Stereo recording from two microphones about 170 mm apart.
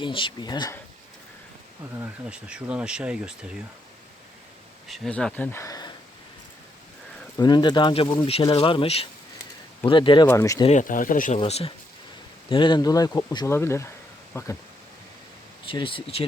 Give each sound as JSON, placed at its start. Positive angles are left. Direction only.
{"t": 0.0, "sound": "speech", "side_deg": 30}
{"t": 2.0, "sound": "speech", "side_deg": -5}
{"t": 4.9, "sound": "speech", "side_deg": 5}
{"t": 7.3, "sound": "speech", "side_deg": 25}
{"t": 10.2, "sound": "speech", "side_deg": 20}
{"t": 10.7, "sound": "speech", "side_deg": 50}
{"t": 11.3, "sound": "speech", "side_deg": 35}
{"t": 15.6, "sound": "speech", "side_deg": 30}